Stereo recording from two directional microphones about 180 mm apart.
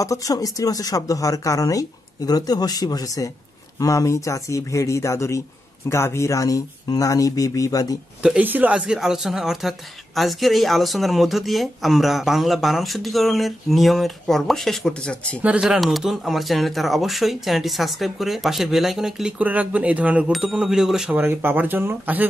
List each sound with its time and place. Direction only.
0.0 s speech: 20° left (ahead or behind)
8.2 s speech: 5° right (ahead or behind)
15.4 s speech: 5° right (ahead or behind)